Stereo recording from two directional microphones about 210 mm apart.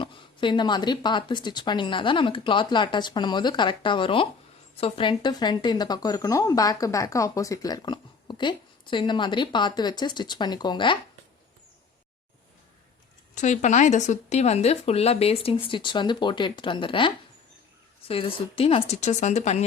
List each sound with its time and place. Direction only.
0.0 s a woman's voice: 25° left (ahead or behind)
13.3 s a woman's voice: 35° left (ahead or behind)
18.1 s speech: 25° left (ahead or behind)